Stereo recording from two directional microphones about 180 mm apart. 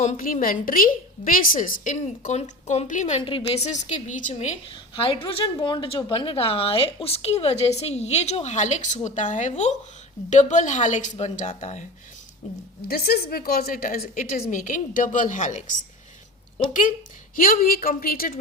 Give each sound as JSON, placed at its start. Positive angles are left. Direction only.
{"t": 0.0, "sound": "a woman's voice", "side_deg": 45}
{"t": 3.2, "sound": "speech", "side_deg": 30}
{"t": 4.7, "sound": "a woman's voice", "side_deg": 30}
{"t": 12.9, "sound": "a woman's voice", "side_deg": 60}
{"t": 17.3, "sound": "a woman's voice", "side_deg": 50}